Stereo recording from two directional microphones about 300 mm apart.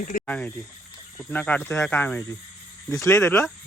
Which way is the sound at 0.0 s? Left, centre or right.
Left.